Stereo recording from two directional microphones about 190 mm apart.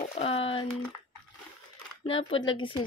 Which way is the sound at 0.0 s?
35° left (ahead or behind).